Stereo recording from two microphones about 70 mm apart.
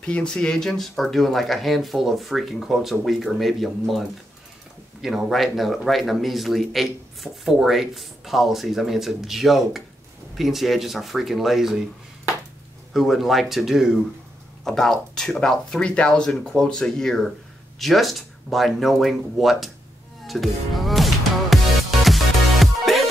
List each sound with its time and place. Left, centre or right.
0.0 s speech: centre
5.0 s speech: centre
12.9 s speech: centre
20.2 s music: centre